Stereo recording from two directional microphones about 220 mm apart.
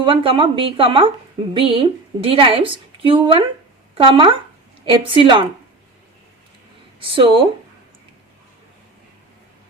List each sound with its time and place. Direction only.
0.0 s a woman's voice: 25° right (ahead or behind)
7.0 s a woman's voice: 20° right (ahead or behind)